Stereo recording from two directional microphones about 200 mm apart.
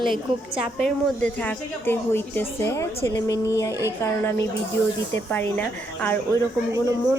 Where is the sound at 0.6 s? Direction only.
Centre (ahead or behind); by 3.8 s 15° left (ahead or behind).